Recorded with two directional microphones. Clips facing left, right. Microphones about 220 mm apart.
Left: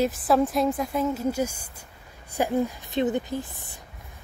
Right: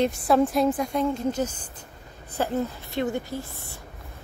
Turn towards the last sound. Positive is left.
turn(degrees=15)  # may be behind; listen again after turning